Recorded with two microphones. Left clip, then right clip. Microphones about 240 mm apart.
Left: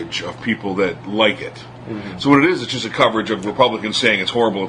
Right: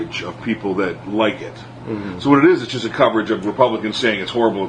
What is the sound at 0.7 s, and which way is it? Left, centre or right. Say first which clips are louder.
Speech: left 2 dB; left.